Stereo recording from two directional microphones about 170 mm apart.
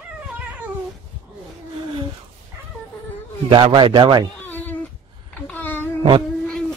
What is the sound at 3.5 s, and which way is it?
Speech, 30° right (ahead or behind).